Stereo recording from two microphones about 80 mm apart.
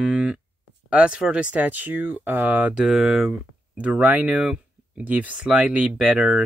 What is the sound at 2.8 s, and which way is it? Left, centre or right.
Speech, centre.